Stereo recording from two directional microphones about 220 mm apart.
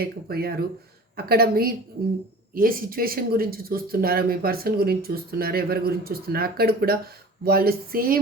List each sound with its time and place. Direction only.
0.0 s speech: 45° right (ahead or behind)